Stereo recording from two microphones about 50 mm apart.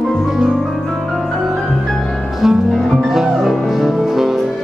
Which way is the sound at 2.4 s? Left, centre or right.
Centre.